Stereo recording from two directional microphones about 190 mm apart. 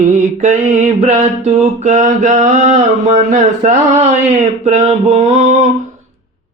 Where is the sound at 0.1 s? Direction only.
40° right (ahead or behind).